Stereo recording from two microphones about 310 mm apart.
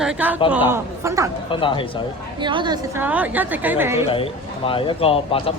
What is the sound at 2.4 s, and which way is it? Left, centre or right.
A woman's voice, centre.